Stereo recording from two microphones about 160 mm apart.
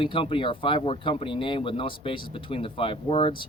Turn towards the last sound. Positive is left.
turn(degrees=35)  # may be behind; listen again after turning